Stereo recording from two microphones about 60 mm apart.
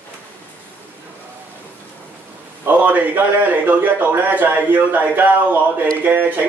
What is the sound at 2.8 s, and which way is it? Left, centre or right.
A man's voice, right.